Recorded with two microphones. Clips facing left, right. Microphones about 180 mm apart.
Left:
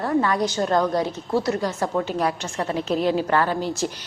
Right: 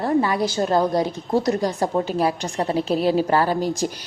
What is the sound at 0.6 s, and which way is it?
Speech, 25° right (ahead or behind).